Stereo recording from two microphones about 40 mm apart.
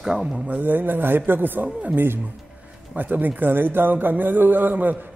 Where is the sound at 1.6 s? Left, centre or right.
Right.